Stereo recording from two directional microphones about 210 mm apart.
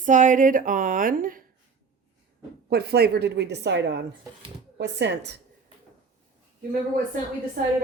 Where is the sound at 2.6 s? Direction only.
50° right (ahead or behind).